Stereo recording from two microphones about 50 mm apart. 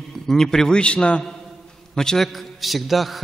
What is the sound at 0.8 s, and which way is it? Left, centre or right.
Speech, left.